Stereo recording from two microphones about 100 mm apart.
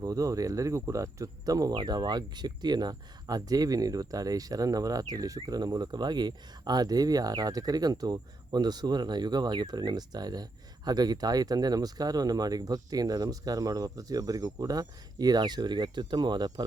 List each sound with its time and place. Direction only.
0.0 s cricket: 35° right (ahead or behind)